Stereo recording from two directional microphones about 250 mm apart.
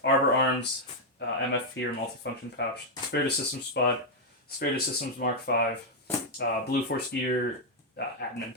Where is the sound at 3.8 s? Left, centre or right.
Left.